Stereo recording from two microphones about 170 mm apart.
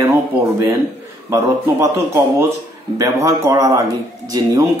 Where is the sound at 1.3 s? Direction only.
15° right (ahead or behind).